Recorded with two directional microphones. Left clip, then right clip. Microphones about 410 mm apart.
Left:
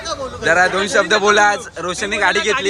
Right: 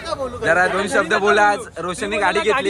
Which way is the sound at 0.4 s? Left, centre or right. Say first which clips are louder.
Left 3 dB; centre.